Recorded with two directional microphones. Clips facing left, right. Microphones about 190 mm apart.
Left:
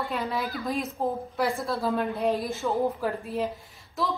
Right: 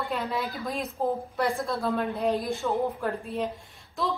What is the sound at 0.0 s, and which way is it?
A woman's voice, centre (ahead or behind).